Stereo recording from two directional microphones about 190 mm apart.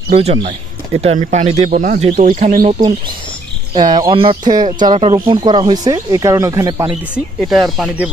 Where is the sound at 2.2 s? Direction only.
45° right (ahead or behind).